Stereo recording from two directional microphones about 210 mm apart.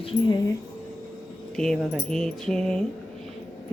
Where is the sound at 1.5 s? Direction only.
5° left (ahead or behind).